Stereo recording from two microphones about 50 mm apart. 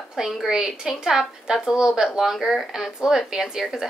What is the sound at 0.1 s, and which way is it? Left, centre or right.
A woman's voice, centre.